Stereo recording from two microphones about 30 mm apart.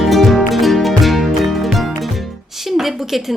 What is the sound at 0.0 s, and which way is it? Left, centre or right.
Music, centre.